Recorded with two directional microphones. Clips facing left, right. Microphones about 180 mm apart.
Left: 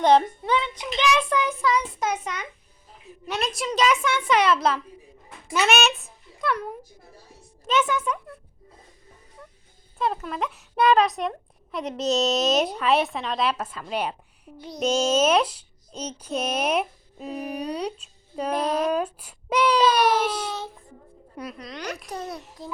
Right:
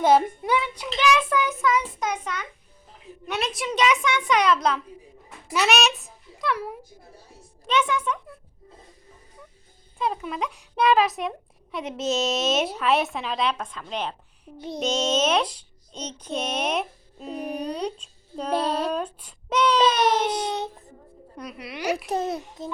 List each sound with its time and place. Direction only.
0.0 s a child's voice: 10° right (ahead or behind); by 2.5 s 10° left (ahead or behind)
3.2 s a child's voice: centre (ahead or behind)
10.0 s speech: centre (ahead or behind)
18.5 s speech: 30° right (ahead or behind)
18.9 s speech: 10° left (ahead or behind)
19.8 s a child's voice: 20° right (ahead or behind)
21.5 s a child's voice: 10° right (ahead or behind)
22.0 s a child's voice: 25° right (ahead or behind)